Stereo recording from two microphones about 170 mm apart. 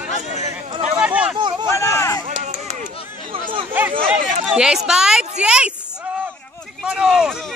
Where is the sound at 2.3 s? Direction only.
45° right (ahead or behind).